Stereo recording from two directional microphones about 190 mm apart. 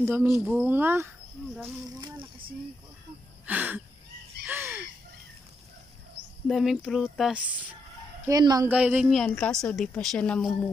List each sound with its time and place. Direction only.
0.0 s speech: 10° right (ahead or behind)
1.6 s a sound: 20° right (ahead or behind)
3.4 s speech: 10° right (ahead or behind)
4.5 s a sound: 10° right (ahead or behind)
6.5 s a woman's voice: centre (ahead or behind)
8.3 s speech: 20° right (ahead or behind)
8.6 s a woman's voice: 10° right (ahead or behind)